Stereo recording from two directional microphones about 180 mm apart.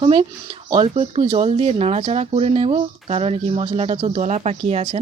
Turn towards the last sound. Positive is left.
turn(degrees=-35)  # may be behind; listen again after turning